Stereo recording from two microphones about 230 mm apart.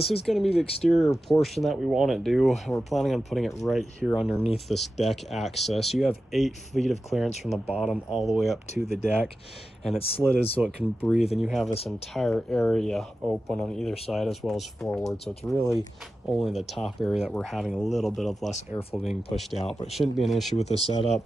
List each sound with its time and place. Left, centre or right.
0.0 s speech: left
0.3 s speech: centre
10.6 s speech: centre
19.3 s speech: centre
20.5 s speech: left